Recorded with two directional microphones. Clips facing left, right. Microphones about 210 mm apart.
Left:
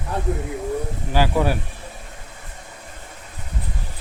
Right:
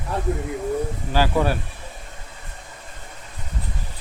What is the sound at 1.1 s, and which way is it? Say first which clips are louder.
Speech: left 1 dB; 15° left (ahead or behind).